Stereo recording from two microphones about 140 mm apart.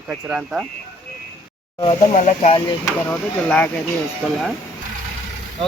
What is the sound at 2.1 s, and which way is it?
Speech, 60° left (ahead or behind).